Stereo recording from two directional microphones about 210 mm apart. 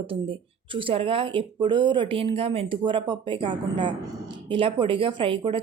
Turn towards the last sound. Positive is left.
turn(degrees=-25)  # may be behind; listen again after turning